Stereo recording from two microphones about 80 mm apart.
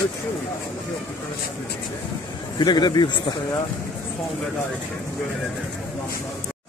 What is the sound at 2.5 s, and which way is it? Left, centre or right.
Speech, left.